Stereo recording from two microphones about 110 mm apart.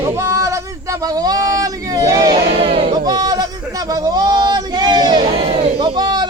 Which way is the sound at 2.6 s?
60° right (ahead or behind).